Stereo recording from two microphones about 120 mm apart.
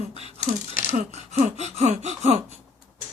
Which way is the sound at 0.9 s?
70° right (ahead or behind).